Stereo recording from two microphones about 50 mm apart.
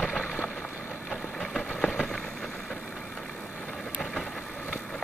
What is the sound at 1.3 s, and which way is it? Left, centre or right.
Vehicle, centre.